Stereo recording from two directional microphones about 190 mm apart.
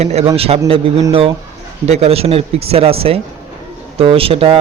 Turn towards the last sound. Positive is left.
turn(degrees=-30)  # may be behind; listen again after turning